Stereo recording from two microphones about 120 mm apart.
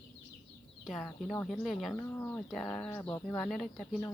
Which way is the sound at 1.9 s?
20° left (ahead or behind).